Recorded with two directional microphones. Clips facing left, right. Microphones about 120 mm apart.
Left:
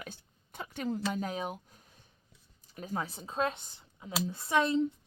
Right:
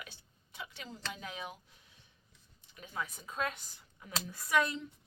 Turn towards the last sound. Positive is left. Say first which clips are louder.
# left 4 dB
turn(degrees=25)  # may be behind; listen again after turning